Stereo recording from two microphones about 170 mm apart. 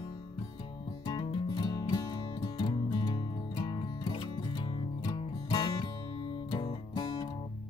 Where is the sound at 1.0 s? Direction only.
25° left (ahead or behind).